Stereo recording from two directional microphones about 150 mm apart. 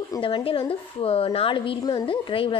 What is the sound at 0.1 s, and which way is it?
A woman's voice, 35° left (ahead or behind).